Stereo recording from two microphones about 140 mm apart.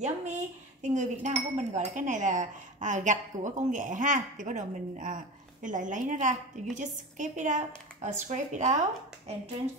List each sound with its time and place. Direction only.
0.0 s speech: 55° right (ahead or behind)